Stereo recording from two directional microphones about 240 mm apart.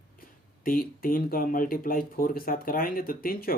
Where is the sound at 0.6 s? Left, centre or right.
Left.